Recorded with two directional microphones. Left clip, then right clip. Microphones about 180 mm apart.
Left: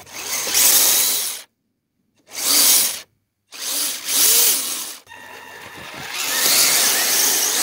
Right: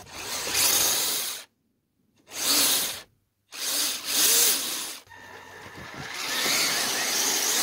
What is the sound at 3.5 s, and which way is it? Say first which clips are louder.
Tools: left 3 dB; 30° left (ahead or behind).